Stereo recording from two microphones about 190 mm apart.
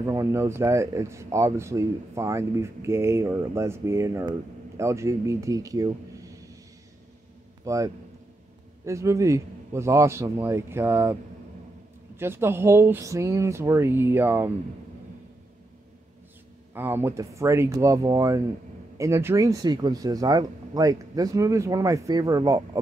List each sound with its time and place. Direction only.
0.0 s speech: 15° right (ahead or behind)
7.6 s speech: 15° right (ahead or behind)
12.2 s speech: 10° right (ahead or behind)
16.7 s speech: 10° right (ahead or behind)